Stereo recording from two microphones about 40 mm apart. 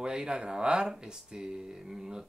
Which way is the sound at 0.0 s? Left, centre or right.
Right.